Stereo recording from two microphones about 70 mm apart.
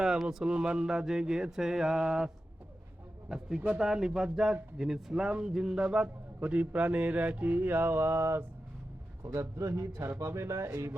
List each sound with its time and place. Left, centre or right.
0.0 s a man's voice: centre; by 10.9 s right